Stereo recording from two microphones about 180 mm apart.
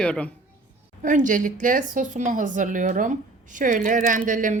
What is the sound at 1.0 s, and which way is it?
Speech, 45° right (ahead or behind).